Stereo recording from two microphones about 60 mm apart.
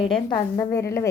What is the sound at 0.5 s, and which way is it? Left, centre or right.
Speech, left.